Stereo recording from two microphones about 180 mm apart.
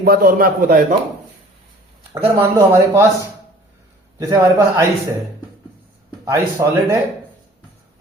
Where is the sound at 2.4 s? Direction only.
15° right (ahead or behind).